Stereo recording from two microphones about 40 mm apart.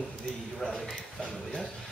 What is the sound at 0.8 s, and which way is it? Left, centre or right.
Speech, centre.